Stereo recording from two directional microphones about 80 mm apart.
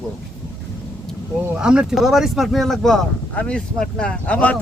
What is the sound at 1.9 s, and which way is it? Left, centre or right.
A man's voice, centre.